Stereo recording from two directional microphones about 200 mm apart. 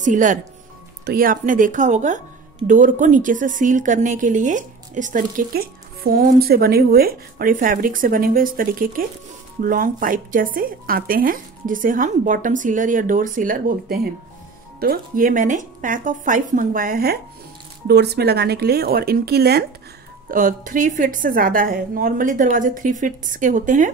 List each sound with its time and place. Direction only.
0.0 s speech: 40° right (ahead or behind)